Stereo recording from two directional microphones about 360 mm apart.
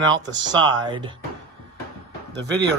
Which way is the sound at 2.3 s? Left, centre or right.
Right.